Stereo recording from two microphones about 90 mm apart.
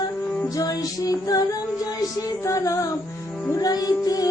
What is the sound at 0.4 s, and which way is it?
Music, 40° left (ahead or behind).